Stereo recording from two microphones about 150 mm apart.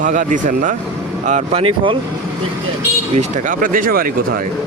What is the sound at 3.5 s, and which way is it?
Speech, 65° right (ahead or behind).